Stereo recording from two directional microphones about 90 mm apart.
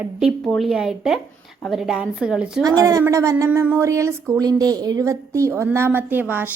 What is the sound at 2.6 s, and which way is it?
Speech, 45° right (ahead or behind).